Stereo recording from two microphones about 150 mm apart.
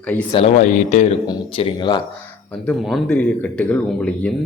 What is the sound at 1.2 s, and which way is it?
Speech, 35° left (ahead or behind).